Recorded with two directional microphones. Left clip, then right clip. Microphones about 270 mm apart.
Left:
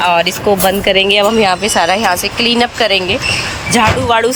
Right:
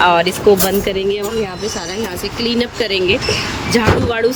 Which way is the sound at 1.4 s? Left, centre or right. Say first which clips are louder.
Left 11 dB; left.